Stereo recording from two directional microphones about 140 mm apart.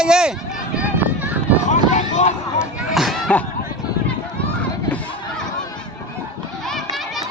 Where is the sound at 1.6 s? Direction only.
60° left (ahead or behind).